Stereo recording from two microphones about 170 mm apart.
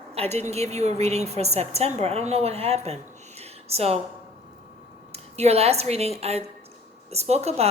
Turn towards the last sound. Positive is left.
turn(degrees=-40)  # may be behind; listen again after turning